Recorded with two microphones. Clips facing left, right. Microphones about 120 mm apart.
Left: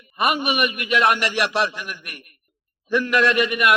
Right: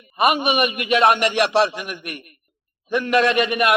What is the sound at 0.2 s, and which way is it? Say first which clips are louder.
A man's voice: right 3 dB; 20° right (ahead or behind).